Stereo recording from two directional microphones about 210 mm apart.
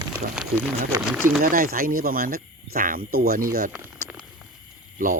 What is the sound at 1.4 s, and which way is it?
Speech, 40° right (ahead or behind).